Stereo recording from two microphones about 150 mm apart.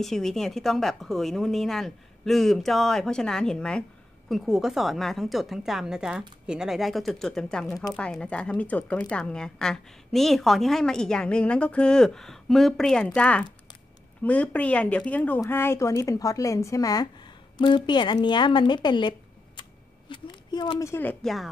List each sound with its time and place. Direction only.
0.0 s a woman's voice: centre (ahead or behind); by 20.7 s 35° left (ahead or behind)
20.8 s speech: 15° left (ahead or behind)